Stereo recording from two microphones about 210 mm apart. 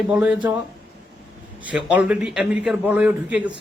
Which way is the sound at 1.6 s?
5° right (ahead or behind).